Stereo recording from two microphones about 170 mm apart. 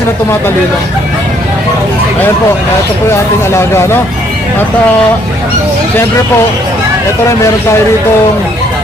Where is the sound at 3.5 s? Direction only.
15° left (ahead or behind).